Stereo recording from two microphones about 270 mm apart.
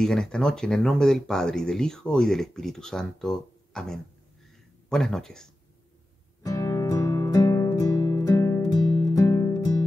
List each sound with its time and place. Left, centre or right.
0.0 s speech: centre
6.4 s music: centre